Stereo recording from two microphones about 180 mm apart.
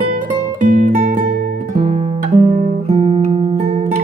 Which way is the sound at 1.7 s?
45° right (ahead or behind).